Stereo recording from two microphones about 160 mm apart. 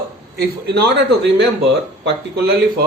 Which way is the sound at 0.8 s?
90° right.